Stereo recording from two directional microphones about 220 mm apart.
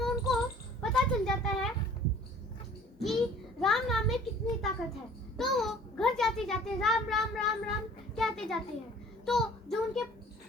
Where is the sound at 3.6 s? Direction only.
Centre (ahead or behind).